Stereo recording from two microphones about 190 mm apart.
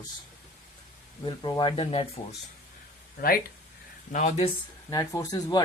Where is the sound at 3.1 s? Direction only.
50° left (ahead or behind).